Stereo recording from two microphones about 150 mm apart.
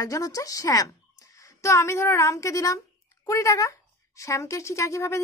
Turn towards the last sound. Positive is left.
turn(degrees=20)  # may be behind; listen again after turning